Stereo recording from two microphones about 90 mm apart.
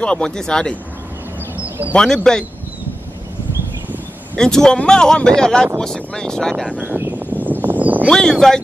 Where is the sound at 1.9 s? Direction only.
10° left (ahead or behind).